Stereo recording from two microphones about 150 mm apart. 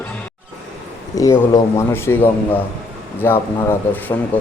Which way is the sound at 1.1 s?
25° left (ahead or behind).